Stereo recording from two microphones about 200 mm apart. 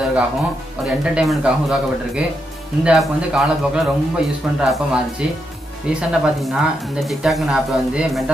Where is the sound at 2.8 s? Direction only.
5° right (ahead or behind).